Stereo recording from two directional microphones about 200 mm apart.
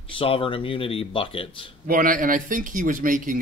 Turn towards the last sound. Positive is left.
turn(degrees=-45)  # may be behind; listen again after turning